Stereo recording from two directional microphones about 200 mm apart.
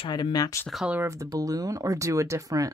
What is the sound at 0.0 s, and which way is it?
Speech, 20° left (ahead or behind).